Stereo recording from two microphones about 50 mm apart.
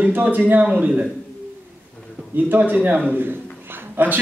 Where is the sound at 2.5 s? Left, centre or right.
Right.